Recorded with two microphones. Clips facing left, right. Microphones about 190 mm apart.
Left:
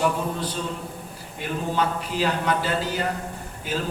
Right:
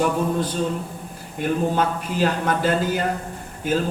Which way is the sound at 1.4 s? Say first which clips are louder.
Right 4 dB; 50° right (ahead or behind).